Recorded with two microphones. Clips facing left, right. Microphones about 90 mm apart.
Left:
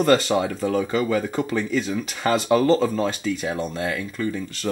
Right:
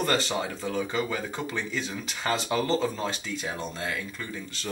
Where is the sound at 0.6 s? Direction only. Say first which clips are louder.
Left 8 dB; 55° left (ahead or behind).